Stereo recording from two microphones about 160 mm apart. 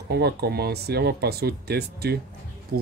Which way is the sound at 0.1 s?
90° right.